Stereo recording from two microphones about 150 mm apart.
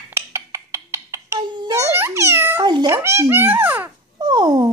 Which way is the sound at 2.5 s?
30° right (ahead or behind).